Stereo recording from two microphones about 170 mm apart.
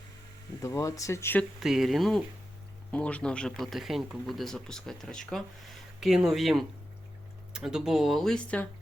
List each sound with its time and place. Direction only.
0.6 s speech: 20° left (ahead or behind)
1.5 s speech: centre (ahead or behind)